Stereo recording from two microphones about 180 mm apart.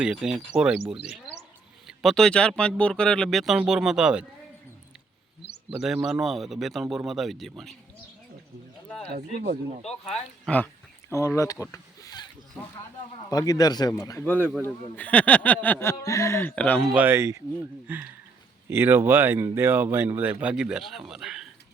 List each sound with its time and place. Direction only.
0.0 s speech: 5° right (ahead or behind)
1.9 s speech: centre (ahead or behind)
5.7 s speech: 5° right (ahead or behind)
9.0 s speech: 60° right (ahead or behind)
9.8 s speech: 35° left (ahead or behind)
10.4 s speech: 10° left (ahead or behind)
11.1 s a sound: 15° left (ahead or behind)
13.3 s speech: 20° left (ahead or behind)
16.9 s speech: 10° right (ahead or behind)